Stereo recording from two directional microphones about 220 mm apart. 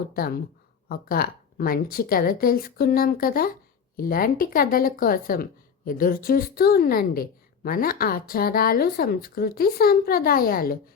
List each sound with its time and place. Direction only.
0.1 s speech: 45° left (ahead or behind)